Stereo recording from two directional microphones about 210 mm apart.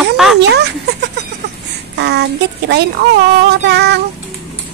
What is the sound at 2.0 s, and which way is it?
Speech, 55° right (ahead or behind).